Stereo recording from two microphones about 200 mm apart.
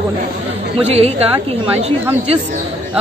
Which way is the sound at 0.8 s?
30° right (ahead or behind).